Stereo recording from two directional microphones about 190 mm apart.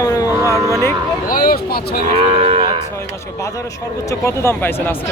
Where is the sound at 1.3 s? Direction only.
50° left (ahead or behind).